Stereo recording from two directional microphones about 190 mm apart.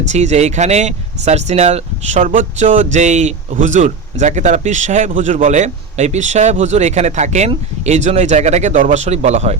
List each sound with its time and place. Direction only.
0.1 s speech: 35° right (ahead or behind)